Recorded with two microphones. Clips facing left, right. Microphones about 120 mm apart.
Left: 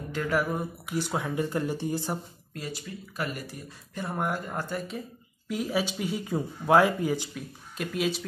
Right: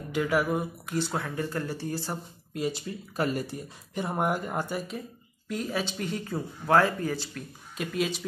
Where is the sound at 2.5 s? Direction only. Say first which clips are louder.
Right 6 dB; 25° right (ahead or behind).